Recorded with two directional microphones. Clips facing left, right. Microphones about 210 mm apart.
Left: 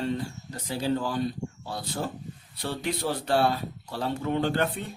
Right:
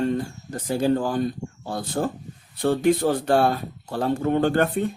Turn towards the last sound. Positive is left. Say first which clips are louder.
# right 6 dB
turn(degrees=-50)  # may be behind; listen again after turning